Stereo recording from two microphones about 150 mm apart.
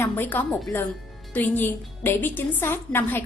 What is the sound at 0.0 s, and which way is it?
Speech, 10° left (ahead or behind).